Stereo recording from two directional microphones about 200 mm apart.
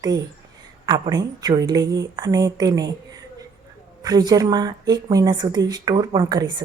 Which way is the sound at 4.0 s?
20° right (ahead or behind).